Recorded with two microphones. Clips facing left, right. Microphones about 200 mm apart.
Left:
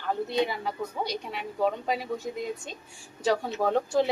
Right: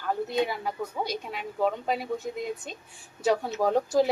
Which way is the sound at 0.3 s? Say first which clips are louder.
Even; 5° right (ahead or behind).